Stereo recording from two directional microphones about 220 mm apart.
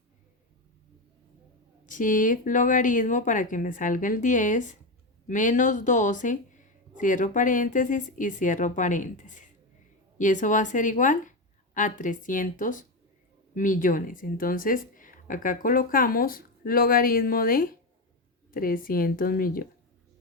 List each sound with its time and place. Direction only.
1.9 s speech: 35° left (ahead or behind)